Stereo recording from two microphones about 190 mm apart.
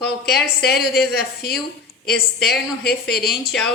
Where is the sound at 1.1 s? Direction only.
55° left (ahead or behind).